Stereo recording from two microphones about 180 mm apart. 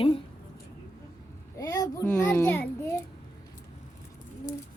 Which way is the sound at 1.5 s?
20° left (ahead or behind).